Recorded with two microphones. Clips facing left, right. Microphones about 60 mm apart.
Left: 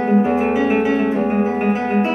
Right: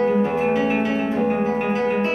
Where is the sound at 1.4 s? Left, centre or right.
Centre.